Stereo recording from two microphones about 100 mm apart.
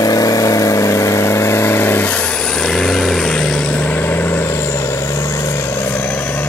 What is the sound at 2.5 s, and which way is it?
Vehicle, 5° left (ahead or behind).